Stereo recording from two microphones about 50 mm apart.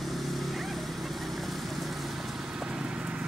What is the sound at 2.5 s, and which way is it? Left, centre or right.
Vehicle, centre.